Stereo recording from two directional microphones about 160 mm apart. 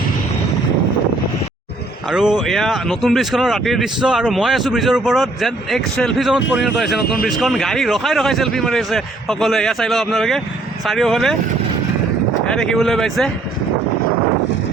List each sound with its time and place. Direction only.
2.0 s speech: 5° right (ahead or behind)
12.5 s speech: 5° left (ahead or behind)